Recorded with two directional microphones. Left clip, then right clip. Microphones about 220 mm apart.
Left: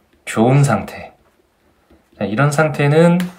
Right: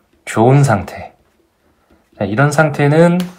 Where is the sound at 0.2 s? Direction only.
15° right (ahead or behind).